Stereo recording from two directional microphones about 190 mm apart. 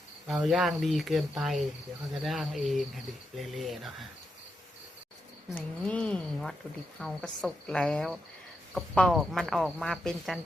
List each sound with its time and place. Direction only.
0.3 s cricket: centre (ahead or behind)
5.5 s cricket: 5° left (ahead or behind)